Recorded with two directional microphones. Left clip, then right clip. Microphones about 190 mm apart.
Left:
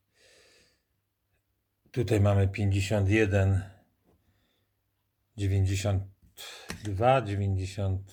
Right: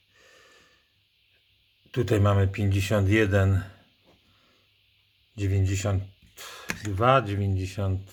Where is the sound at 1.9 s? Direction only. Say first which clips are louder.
Right 3 dB; 5° right (ahead or behind).